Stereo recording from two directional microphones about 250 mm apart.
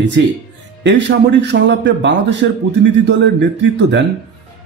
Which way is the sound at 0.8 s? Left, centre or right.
Right.